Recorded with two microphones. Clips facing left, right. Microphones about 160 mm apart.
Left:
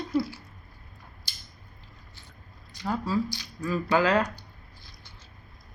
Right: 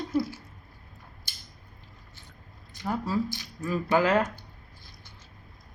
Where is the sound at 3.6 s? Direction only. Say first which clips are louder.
Even; 20° right (ahead or behind).